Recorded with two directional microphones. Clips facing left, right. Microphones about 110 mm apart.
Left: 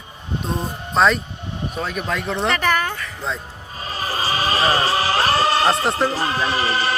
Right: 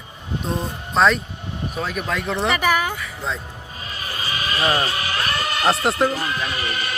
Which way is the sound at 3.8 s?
35° left (ahead or behind).